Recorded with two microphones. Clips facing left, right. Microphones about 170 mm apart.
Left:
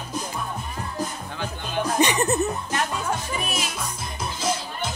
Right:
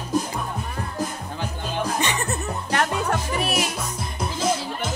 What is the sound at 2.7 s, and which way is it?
Music, 70° right (ahead or behind).